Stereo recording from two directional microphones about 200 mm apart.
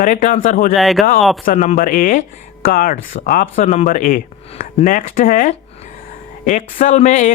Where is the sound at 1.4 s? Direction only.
35° left (ahead or behind).